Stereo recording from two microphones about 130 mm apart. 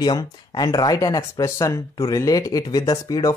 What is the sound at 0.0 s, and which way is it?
Speech, 35° left (ahead or behind).